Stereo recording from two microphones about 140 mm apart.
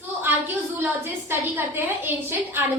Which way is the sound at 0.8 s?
15° right (ahead or behind).